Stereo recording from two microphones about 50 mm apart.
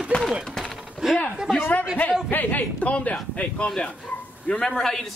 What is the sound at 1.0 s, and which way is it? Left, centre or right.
Speech, centre.